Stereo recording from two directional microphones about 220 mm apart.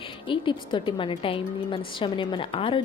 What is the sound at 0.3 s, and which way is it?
A woman's voice, 20° left (ahead or behind).